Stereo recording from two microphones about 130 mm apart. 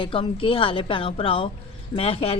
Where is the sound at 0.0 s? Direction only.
45° left (ahead or behind).